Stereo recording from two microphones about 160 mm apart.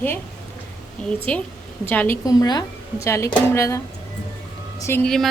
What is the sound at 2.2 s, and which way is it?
Speech, 25° left (ahead or behind).